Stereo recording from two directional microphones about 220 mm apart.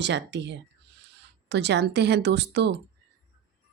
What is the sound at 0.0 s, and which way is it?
Speech, 55° right (ahead or behind).